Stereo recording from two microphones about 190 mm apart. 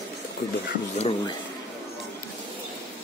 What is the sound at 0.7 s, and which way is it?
Speech, 35° left (ahead or behind).